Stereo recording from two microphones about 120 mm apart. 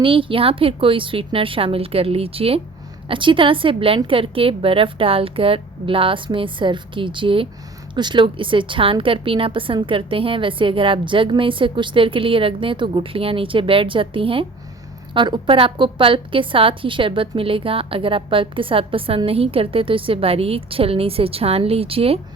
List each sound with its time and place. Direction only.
0.0 s a woman's voice: 45° right (ahead or behind)